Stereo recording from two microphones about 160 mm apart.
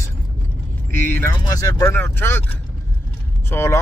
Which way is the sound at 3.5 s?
15° left (ahead or behind).